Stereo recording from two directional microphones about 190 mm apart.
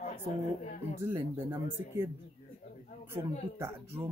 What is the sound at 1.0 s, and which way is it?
Speech, 15° right (ahead or behind).